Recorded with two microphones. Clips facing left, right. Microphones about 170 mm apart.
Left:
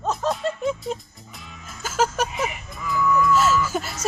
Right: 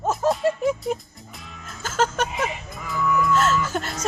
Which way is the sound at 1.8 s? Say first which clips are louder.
Even; 5° left (ahead or behind).